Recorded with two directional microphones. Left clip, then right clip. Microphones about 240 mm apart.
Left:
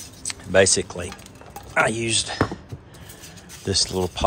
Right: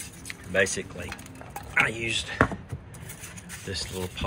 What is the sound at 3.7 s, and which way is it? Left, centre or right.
Speech, centre.